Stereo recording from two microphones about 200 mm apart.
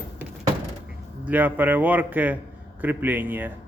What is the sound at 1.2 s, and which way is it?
A man's voice, 10° right (ahead or behind).